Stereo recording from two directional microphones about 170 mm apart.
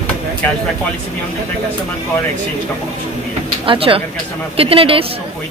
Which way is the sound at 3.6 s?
30° right (ahead or behind).